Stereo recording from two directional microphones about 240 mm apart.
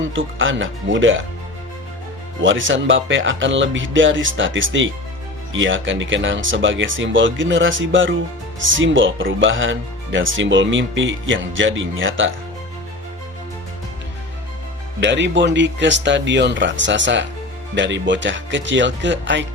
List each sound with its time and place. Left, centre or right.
0.1 s speech: right
2.4 s speech: right
15.0 s speech: right